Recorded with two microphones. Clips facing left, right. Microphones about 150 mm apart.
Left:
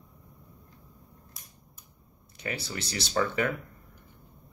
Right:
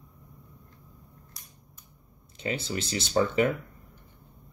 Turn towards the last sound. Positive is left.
turn(degrees=-20)  # may be behind; listen again after turning